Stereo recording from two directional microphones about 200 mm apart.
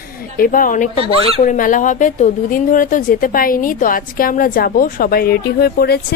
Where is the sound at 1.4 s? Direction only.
40° left (ahead or behind).